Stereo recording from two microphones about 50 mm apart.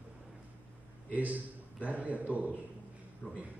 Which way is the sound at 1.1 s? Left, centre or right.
Right.